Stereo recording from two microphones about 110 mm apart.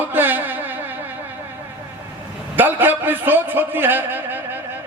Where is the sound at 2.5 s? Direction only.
15° right (ahead or behind).